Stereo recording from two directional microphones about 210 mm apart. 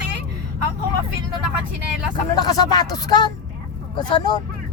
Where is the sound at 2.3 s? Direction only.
20° left (ahead or behind).